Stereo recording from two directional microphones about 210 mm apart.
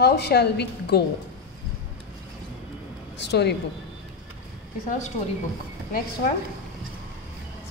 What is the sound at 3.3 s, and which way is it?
Speech, 55° left (ahead or behind).